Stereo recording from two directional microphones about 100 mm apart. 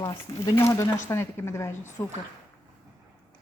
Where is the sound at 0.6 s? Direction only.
30° left (ahead or behind).